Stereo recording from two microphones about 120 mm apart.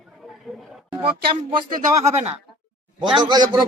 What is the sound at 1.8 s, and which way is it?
Speech, 70° right (ahead or behind).